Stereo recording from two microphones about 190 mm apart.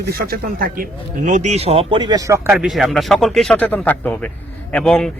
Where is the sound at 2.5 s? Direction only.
Centre (ahead or behind).